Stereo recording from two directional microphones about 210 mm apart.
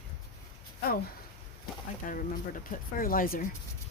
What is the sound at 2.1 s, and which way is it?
Speech, 40° left (ahead or behind).